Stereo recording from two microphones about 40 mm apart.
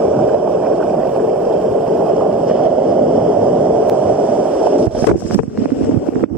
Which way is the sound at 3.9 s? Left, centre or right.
Right.